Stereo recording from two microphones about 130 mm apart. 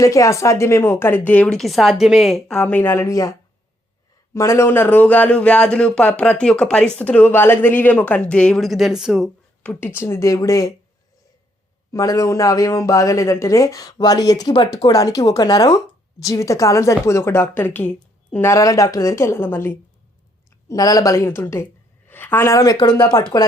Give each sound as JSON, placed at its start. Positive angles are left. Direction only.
{"t": 0.0, "sound": "speech", "side_deg": 25}
{"t": 4.4, "sound": "speech", "side_deg": 20}
{"t": 9.6, "sound": "speech", "side_deg": 15}
{"t": 11.9, "sound": "speech", "side_deg": 25}
{"t": 20.7, "sound": "a woman's voice", "side_deg": 30}